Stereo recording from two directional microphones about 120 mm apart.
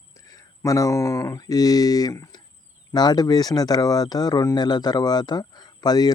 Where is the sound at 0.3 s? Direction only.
30° left (ahead or behind).